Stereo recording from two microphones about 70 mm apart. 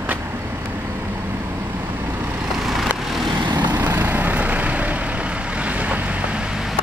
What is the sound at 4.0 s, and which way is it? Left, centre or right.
Vehicle, right.